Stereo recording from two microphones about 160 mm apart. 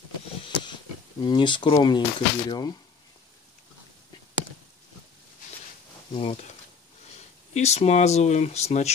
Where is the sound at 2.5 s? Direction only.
25° left (ahead or behind).